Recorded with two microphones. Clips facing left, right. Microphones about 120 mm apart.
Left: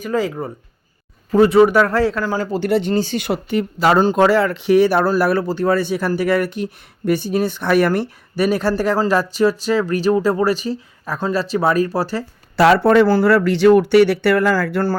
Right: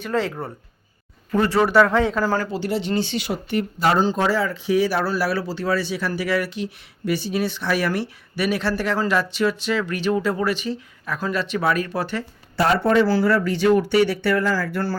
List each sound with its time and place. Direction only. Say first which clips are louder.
0.0 s speech: left 3 dB; 5° left (ahead or behind)
1.3 s speech: left 8 dB; 20° left (ahead or behind)
1.6 s speech: left 2 dB; 10° left (ahead or behind)
2.5 s speech: left 6 dB; 60° left (ahead or behind)
2.9 s speech: left 4 dB; 40° left (ahead or behind)
3.8 s speech: left 5 dB; 90° left
4.1 s speech: left 7 dB; 70° left (ahead or behind); by 12.2 s 35° left (ahead or behind)
12.5 s speech: left 6 dB; 90° left; by 14.9 s 60° left (ahead or behind)